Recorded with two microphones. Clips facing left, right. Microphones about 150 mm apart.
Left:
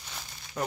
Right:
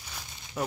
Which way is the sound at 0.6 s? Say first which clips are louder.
Even; 5° right (ahead or behind).